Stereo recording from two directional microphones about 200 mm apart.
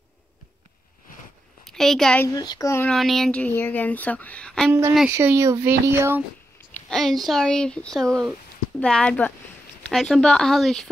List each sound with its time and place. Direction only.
1.6 s a child's voice: centre (ahead or behind)
2.2 s speech: 20° left (ahead or behind)
2.9 s speech: centre (ahead or behind)
5.1 s speech: 15° right (ahead or behind)
6.7 s speech: centre (ahead or behind)